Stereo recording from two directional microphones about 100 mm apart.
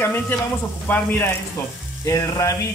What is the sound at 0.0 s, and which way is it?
Speech, 20° left (ahead or behind).